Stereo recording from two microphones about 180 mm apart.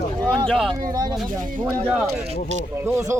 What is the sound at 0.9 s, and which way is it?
Speech, 20° right (ahead or behind).